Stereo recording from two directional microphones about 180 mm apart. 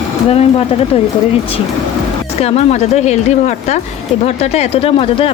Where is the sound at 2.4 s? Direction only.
35° left (ahead or behind).